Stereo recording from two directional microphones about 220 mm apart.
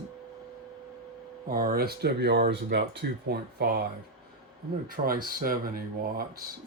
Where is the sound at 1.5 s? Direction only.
40° right (ahead or behind).